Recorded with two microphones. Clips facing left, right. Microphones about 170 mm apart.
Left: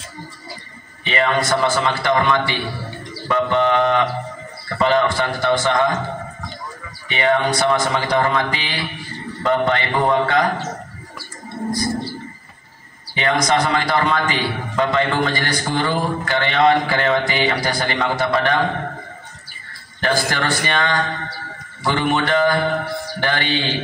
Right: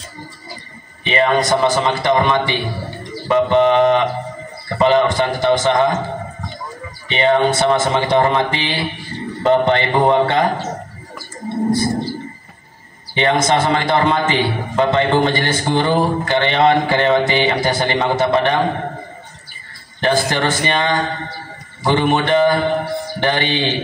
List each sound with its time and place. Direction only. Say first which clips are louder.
1.0 s a man's voice: right 4 dB; 20° right (ahead or behind)
7.1 s a man's voice: right 3 dB; 25° right (ahead or behind)
11.4 s wild animals: right 6 dB; 25° right (ahead or behind)
13.1 s a man's voice: right 3 dB; 25° right (ahead or behind)
20.0 s a man's voice: right 4 dB; 20° right (ahead or behind)